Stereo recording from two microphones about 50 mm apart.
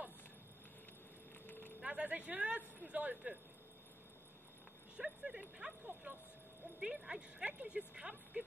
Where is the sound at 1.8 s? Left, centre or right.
Right.